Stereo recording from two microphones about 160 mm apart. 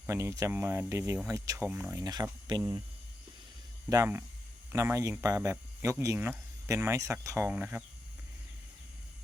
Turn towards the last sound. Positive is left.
turn(degrees=-10)  # may be behind; listen again after turning